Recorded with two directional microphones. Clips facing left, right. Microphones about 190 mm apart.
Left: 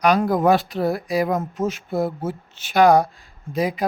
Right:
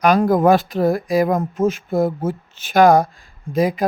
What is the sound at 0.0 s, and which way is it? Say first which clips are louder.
A woman's voice: right 3 dB; 50° right (ahead or behind).